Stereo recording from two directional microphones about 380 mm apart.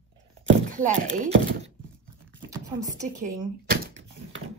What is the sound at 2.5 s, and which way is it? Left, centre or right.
Speech, centre.